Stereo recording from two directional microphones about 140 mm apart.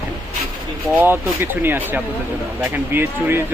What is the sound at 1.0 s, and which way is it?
Speech, 15° right (ahead or behind).